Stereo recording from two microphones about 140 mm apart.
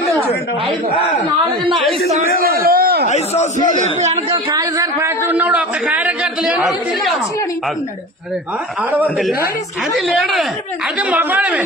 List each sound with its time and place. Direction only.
2.4 s a sound: 90° right
3.1 s a man's voice: 60° left (ahead or behind)
3.7 s a man's voice: 55° right (ahead or behind)
4.5 s a man's voice: 25° right (ahead or behind); by 7.2 s centre (ahead or behind)
9.9 s speech: centre (ahead or behind)
11.0 s speech: 10° right (ahead or behind)